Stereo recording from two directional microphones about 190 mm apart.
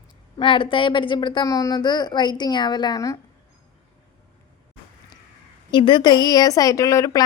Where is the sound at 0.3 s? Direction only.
25° left (ahead or behind).